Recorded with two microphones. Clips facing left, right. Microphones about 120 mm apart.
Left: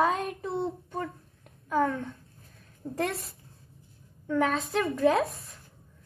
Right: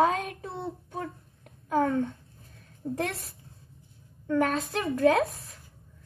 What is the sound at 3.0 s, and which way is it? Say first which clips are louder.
A woman's voice: left 2 dB; centre (ahead or behind).